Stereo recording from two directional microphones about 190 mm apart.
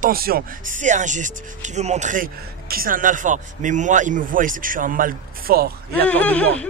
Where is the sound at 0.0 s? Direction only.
50° right (ahead or behind).